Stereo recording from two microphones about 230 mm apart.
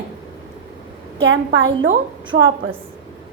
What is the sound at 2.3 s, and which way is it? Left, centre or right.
Speech, right.